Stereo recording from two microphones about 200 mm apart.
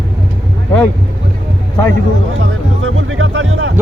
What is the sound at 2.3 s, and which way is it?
Speech, 85° right.